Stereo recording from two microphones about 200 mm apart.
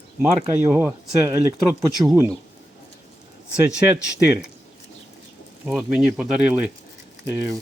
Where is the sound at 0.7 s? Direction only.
10° right (ahead or behind).